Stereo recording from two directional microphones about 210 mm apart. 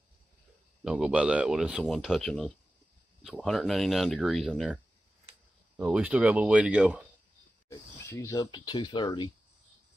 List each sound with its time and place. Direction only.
0.8 s speech: 5° right (ahead or behind)
5.9 s speech: 5° right (ahead or behind)
7.7 s speech: 15° left (ahead or behind)